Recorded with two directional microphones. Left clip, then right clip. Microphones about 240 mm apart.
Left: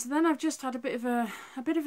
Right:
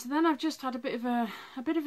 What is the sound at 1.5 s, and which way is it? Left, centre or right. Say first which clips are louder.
Speech: left 1 dB; right.